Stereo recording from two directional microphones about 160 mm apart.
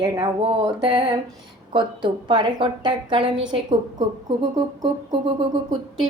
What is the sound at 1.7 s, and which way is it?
A woman's voice, 30° right (ahead or behind).